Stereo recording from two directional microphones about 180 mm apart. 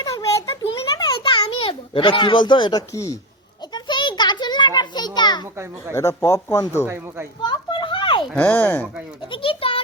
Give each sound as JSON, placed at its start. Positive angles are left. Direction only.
{"t": 0.0, "sound": "a sound", "side_deg": 20}
{"t": 5.9, "sound": "speech", "side_deg": 15}
{"t": 6.8, "sound": "speech", "side_deg": -15}
{"t": 7.4, "sound": "children playing", "side_deg": 25}
{"t": 8.4, "sound": "speech", "side_deg": 10}
{"t": 9.3, "sound": "a child's voice", "side_deg": 30}